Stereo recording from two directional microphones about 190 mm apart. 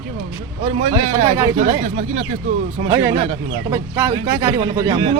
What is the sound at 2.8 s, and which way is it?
A man's voice, 15° right (ahead or behind).